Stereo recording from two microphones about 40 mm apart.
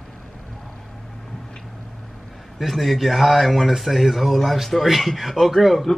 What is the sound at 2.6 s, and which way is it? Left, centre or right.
Speech, centre.